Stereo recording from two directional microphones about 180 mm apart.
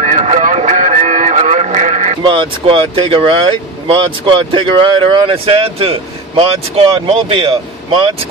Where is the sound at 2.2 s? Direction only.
30° right (ahead or behind).